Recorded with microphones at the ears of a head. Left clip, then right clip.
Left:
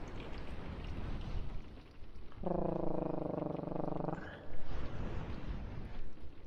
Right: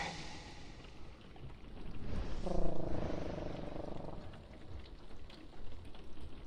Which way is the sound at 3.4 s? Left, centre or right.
Left.